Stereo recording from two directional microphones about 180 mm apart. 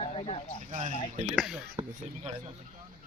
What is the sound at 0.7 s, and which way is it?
Speech, 45° right (ahead or behind).